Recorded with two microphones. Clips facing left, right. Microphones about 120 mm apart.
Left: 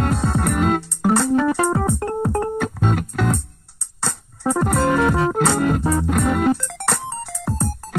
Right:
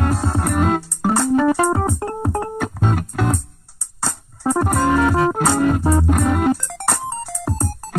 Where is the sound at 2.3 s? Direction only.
10° right (ahead or behind).